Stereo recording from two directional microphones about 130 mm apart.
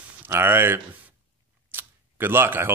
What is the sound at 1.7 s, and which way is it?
Camera, 15° right (ahead or behind).